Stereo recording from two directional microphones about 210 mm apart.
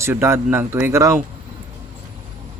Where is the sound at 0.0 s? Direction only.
10° right (ahead or behind).